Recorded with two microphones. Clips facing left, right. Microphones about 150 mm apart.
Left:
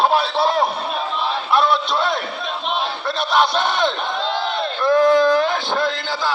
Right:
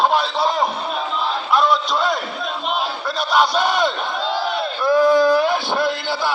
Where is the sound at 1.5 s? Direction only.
Centre (ahead or behind).